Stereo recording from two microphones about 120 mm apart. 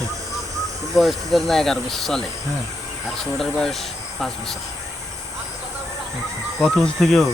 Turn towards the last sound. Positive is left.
turn(degrees=0)  # may be behind; listen again after turning